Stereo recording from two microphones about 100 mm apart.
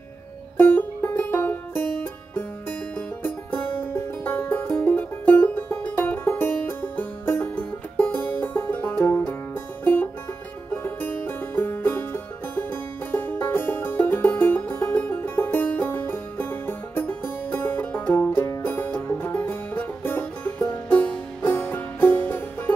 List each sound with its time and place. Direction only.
0.6 s music: 20° left (ahead or behind)
10.7 s music: 20° left (ahead or behind)